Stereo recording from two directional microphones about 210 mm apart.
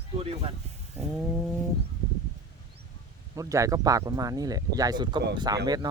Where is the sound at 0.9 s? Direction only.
5° right (ahead or behind).